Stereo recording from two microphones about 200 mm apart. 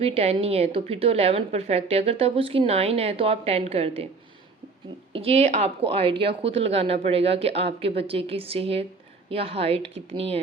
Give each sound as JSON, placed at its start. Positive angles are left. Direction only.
{"t": 0.0, "sound": "a woman's voice", "side_deg": -30}
{"t": 5.1, "sound": "a woman's voice", "side_deg": -30}